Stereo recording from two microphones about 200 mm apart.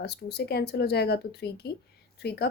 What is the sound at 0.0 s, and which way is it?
Speech, 55° left (ahead or behind).